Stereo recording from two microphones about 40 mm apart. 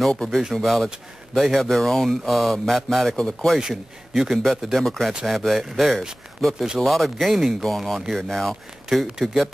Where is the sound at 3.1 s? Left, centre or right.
Centre.